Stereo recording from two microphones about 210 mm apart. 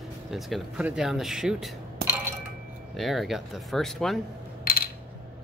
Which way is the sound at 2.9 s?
Centre (ahead or behind).